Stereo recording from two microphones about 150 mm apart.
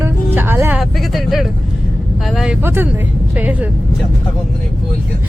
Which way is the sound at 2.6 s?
15° right (ahead or behind).